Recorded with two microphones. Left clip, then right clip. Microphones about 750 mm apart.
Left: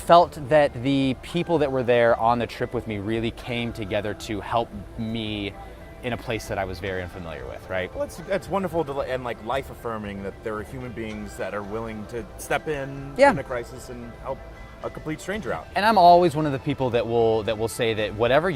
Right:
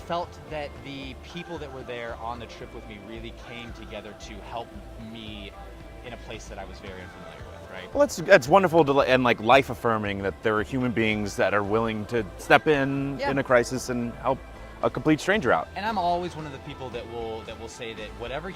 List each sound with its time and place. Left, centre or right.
0.1 s speech: left
7.9 s speech: right
15.7 s speech: left